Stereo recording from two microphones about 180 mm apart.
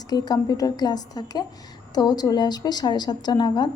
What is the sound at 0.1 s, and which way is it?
A woman's voice, 20° left (ahead or behind).